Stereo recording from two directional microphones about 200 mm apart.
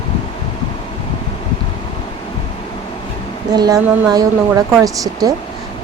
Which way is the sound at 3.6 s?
20° right (ahead or behind).